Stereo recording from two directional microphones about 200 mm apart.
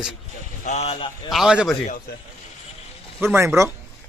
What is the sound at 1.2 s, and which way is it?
Speech, 5° right (ahead or behind).